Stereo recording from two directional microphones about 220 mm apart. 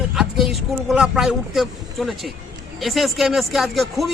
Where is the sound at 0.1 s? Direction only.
Centre (ahead or behind).